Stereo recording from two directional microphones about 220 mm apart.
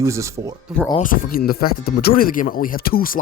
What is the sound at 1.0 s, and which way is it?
Speech, 40° left (ahead or behind).